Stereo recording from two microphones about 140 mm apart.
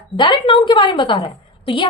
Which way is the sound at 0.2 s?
35° left (ahead or behind).